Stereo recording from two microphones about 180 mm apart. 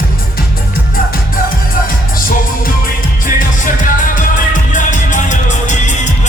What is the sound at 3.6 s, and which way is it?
Music, 45° left (ahead or behind).